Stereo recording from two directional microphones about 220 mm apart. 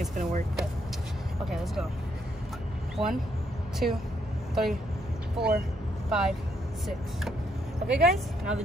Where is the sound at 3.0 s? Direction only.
25° right (ahead or behind).